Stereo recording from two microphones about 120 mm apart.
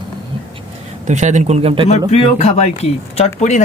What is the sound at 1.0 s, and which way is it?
Speech, 80° right.